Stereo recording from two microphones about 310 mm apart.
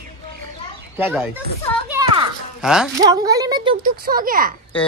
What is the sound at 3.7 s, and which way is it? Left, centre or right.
Speech, right.